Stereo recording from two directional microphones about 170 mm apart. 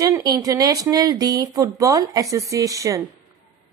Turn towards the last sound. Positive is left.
turn(degrees=-20)  # may be behind; listen again after turning